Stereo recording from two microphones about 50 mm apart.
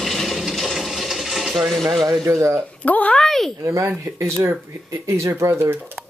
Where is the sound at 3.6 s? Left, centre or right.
Right.